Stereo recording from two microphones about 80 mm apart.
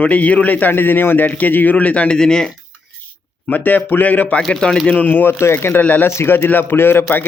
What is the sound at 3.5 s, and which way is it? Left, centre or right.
Speech, left.